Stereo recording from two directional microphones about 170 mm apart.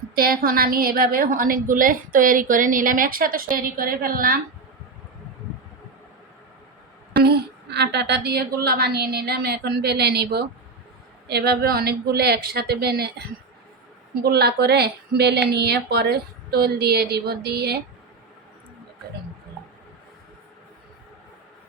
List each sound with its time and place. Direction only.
0.2 s a woman's voice: 60° right (ahead or behind)
7.1 s a woman's voice: 75° right (ahead or behind)